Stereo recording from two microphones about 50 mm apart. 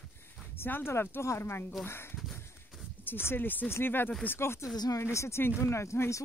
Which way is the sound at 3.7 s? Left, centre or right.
Left.